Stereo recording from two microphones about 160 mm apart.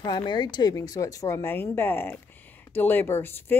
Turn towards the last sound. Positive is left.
turn(degrees=15)  # may be behind; listen again after turning